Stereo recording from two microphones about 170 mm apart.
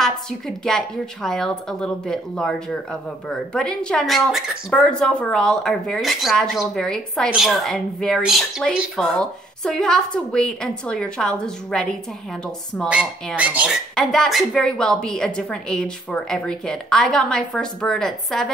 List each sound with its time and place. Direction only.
0.0 s a woman's voice: 5° left (ahead or behind)
13.9 s a woman's voice: centre (ahead or behind)